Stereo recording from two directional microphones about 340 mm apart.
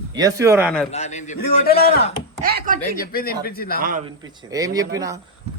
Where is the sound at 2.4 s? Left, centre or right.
Right.